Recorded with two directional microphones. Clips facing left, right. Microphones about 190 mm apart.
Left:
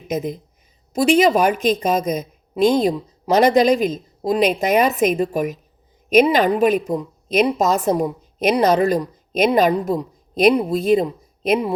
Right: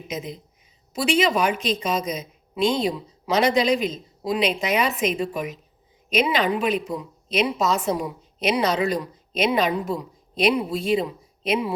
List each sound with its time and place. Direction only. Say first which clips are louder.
0.1 s a woman's voice: left 9 dB; 50° left (ahead or behind)